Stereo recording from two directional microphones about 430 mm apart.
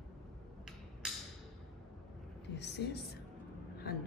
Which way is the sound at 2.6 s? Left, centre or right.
Left.